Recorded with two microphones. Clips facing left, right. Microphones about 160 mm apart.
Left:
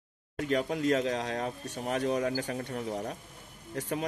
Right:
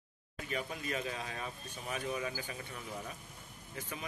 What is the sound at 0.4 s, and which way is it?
Speech, 75° left (ahead or behind).